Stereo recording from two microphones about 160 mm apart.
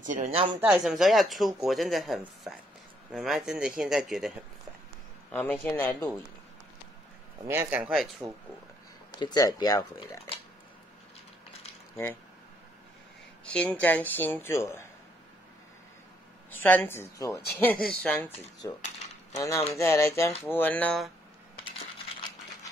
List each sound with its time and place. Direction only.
0.1 s speech: 40° right (ahead or behind)
0.7 s speech: centre (ahead or behind)
5.3 s speech: 10° left (ahead or behind)
7.4 s speech: 15° right (ahead or behind)
9.2 s speech: 25° left (ahead or behind)
13.5 s speech: 5° left (ahead or behind)
16.4 s speech: 10° left (ahead or behind)
18.6 s speech: 20° left (ahead or behind)